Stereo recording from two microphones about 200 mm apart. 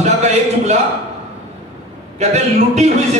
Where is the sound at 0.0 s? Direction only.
35° right (ahead or behind).